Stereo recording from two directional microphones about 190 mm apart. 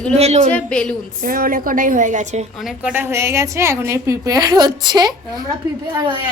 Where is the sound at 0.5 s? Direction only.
5° left (ahead or behind).